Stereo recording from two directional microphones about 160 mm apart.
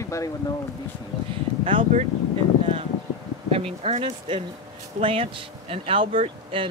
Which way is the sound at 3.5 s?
40° right (ahead or behind).